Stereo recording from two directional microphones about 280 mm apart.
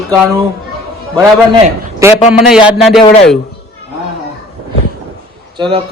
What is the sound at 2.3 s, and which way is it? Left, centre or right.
Speech, centre.